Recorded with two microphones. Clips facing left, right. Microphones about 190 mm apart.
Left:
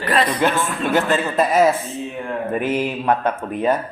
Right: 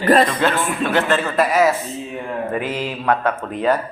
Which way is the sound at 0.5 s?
15° right (ahead or behind).